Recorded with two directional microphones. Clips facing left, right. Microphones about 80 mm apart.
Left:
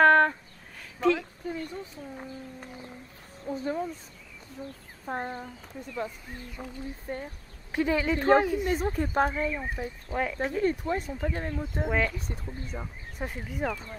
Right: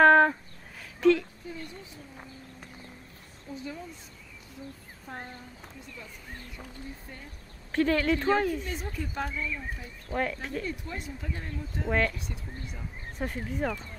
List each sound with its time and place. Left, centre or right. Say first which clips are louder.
0.0 s a sound: right 1 dB; centre
1.0 s speech: right 3 dB; centre
1.4 s a sound: left 6 dB; left
3.4 s speech: left 8 dB; left
5.0 s speech: left 8 dB; left
6.6 s speech: left 5 dB; left
7.7 s speech: right 1 dB; centre
8.6 s speech: left 8 dB; left
10.1 s speech: even; centre
10.6 s speech: left 9 dB; left
11.9 s speech: right 1 dB; centre
12.2 s speech: left 2 dB; left
13.2 s speech: right 1 dB; centre